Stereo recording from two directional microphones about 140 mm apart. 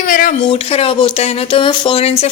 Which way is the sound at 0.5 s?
45° left (ahead or behind).